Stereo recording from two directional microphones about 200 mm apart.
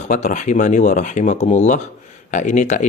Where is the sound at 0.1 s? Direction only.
35° left (ahead or behind).